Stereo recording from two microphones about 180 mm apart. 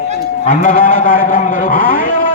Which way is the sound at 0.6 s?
50° left (ahead or behind).